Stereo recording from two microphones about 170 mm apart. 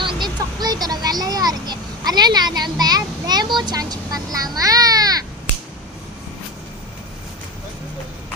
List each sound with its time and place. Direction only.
0.0 s vehicle: 25° right (ahead or behind)